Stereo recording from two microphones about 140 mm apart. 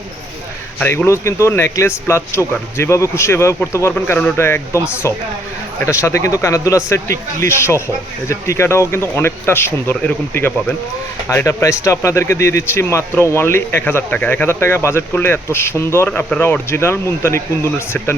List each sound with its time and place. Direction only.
0.8 s speech: 15° left (ahead or behind)